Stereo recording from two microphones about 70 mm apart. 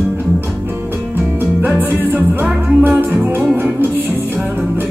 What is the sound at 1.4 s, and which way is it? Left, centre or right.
Music, right.